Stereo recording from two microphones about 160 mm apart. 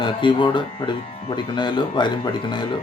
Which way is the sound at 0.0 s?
30° left (ahead or behind).